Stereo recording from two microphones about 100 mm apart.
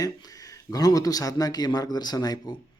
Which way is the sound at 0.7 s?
35° left (ahead or behind).